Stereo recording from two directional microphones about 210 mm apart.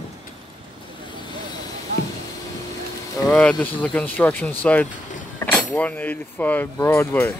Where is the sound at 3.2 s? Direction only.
5° left (ahead or behind).